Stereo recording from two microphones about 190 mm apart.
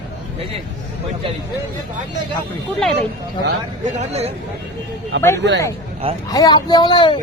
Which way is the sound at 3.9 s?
35° right (ahead or behind).